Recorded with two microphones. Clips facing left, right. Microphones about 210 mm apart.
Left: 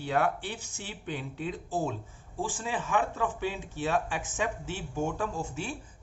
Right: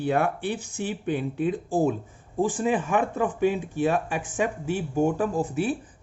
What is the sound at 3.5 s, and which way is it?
Speech, 10° right (ahead or behind).